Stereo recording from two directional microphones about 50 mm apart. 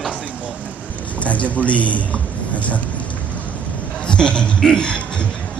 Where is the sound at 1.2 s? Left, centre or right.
Left.